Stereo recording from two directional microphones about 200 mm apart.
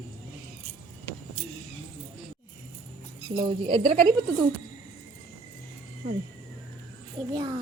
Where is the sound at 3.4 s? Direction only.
25° right (ahead or behind).